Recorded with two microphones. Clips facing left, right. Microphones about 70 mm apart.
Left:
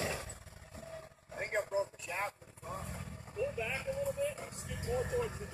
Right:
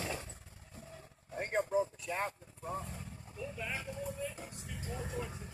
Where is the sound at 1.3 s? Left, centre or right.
Centre.